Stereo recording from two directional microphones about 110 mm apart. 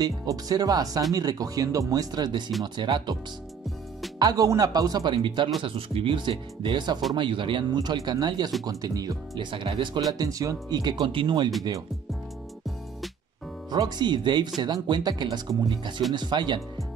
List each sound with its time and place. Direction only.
0.0 s speech: 35° right (ahead or behind)
4.2 s speech: 35° right (ahead or behind)
13.7 s speech: 40° right (ahead or behind)